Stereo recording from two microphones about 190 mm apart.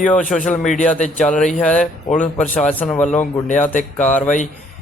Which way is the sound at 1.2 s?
5° left (ahead or behind).